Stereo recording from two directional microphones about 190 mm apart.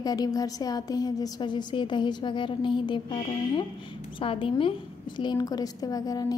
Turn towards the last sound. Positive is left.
turn(degrees=20)  # may be behind; listen again after turning